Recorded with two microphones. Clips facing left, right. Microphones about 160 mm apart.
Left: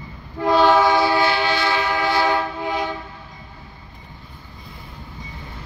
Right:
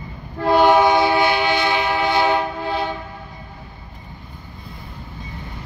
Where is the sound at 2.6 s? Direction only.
15° left (ahead or behind).